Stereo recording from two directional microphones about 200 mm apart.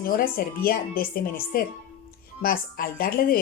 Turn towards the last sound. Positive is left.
turn(degrees=45)  # may be behind; listen again after turning